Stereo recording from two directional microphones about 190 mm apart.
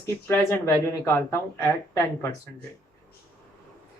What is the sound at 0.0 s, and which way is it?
Speech, 15° left (ahead or behind).